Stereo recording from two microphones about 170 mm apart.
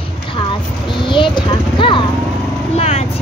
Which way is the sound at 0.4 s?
30° left (ahead or behind).